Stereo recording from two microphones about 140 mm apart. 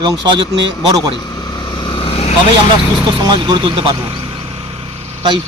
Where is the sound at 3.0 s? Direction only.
30° right (ahead or behind).